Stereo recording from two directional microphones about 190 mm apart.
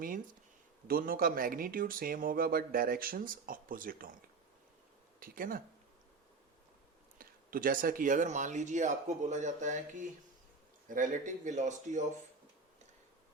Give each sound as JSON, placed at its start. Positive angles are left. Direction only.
{"t": 0.9, "sound": "speech", "side_deg": -50}
{"t": 5.2, "sound": "speech", "side_deg": -45}
{"t": 7.2, "sound": "speech", "side_deg": -50}